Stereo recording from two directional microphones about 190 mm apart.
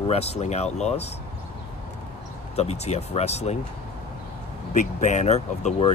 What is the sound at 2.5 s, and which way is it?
Speech, 35° left (ahead or behind).